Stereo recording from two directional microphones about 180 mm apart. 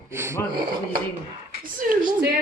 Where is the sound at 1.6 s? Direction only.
50° right (ahead or behind).